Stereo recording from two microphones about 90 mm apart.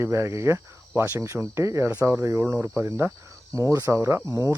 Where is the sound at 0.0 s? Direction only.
30° right (ahead or behind).